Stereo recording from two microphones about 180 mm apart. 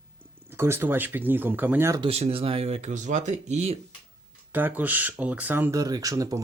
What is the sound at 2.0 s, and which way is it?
Speech, 35° right (ahead or behind).